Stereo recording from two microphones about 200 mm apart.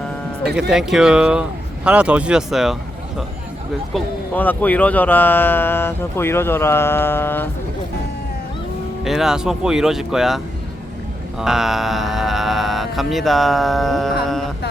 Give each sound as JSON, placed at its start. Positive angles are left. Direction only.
{"t": 0.7, "sound": "speech", "side_deg": -5}
{"t": 3.9, "sound": "speech", "side_deg": 10}
{"t": 9.0, "sound": "speech", "side_deg": 0}